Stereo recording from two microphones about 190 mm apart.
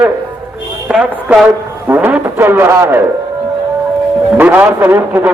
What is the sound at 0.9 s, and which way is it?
A man's voice, 5° right (ahead or behind).